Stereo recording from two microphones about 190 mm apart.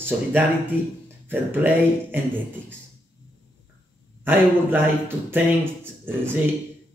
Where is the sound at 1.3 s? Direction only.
10° right (ahead or behind).